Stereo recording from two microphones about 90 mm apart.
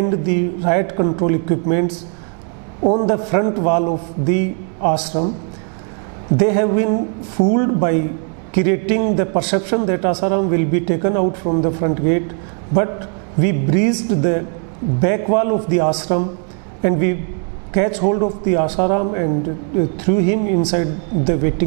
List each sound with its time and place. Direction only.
0.0 s a man's voice: 20° right (ahead or behind)
6.3 s a man's voice: 20° right (ahead or behind)
13.4 s a man's voice: 20° right (ahead or behind)